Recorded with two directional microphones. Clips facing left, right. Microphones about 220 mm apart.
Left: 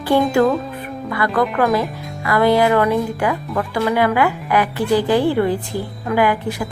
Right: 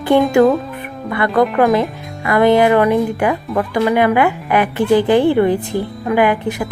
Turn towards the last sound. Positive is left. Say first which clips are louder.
# right 3 dB
turn(degrees=-20)  # may be behind; listen again after turning